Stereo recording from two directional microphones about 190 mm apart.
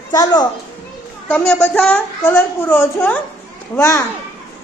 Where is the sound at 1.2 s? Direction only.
10° left (ahead or behind).